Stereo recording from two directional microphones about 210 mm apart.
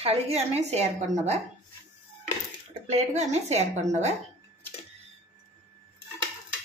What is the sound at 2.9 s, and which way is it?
A woman's voice, 30° right (ahead or behind).